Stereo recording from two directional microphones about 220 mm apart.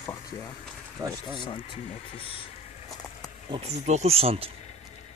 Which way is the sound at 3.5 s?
30° right (ahead or behind).